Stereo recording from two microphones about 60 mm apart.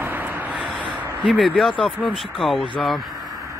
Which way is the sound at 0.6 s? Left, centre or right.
Right.